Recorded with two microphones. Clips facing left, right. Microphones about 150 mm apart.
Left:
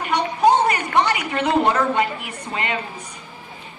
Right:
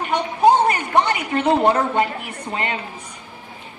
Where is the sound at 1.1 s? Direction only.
35° right (ahead or behind).